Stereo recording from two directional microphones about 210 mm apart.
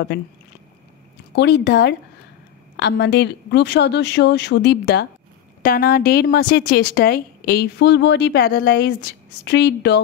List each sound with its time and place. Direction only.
0.1 s speech: 55° left (ahead or behind)
1.3 s a woman's voice: 55° left (ahead or behind)